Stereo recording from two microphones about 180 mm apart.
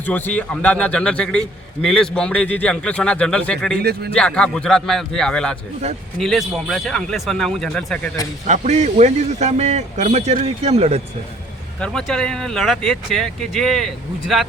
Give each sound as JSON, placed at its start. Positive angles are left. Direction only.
{"t": 0.0, "sound": "a man's voice", "side_deg": 10}
{"t": 3.8, "sound": "speech", "side_deg": -65}
{"t": 4.1, "sound": "a man's voice", "side_deg": 5}
{"t": 8.4, "sound": "speech", "side_deg": -40}
{"t": 11.8, "sound": "a man's voice", "side_deg": 5}